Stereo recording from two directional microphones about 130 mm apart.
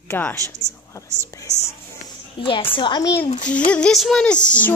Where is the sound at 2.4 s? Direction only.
40° left (ahead or behind).